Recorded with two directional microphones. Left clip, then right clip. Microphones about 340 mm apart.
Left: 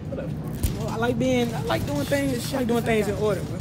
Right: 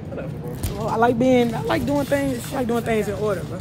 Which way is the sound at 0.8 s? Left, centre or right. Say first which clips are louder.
Right 7 dB; centre.